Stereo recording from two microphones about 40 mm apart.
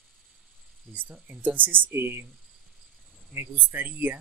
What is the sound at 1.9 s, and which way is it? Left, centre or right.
Speech, right.